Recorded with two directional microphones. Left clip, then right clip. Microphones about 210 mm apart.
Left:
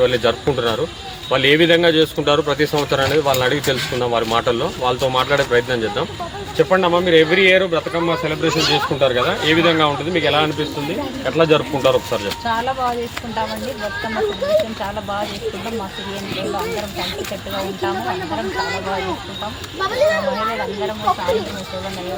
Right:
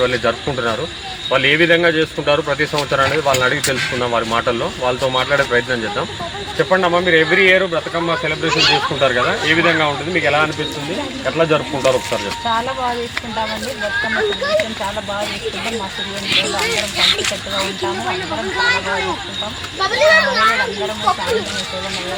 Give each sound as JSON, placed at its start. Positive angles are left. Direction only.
{"t": 0.0, "sound": "speech", "side_deg": 35}
{"t": 6.7, "sound": "speech", "side_deg": 30}
{"t": 8.4, "sound": "speech", "side_deg": 60}
{"t": 9.0, "sound": "speech", "side_deg": 35}
{"t": 16.3, "sound": "speech", "side_deg": 40}
{"t": 19.8, "sound": "a child's voice", "side_deg": 50}